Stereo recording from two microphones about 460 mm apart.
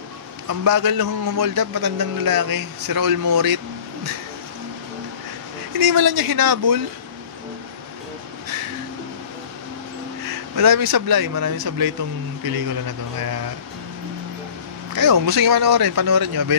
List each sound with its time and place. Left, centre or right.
0.5 s a man's voice: right
5.7 s a man's voice: right
10.5 s a man's voice: right
15.0 s a man's voice: right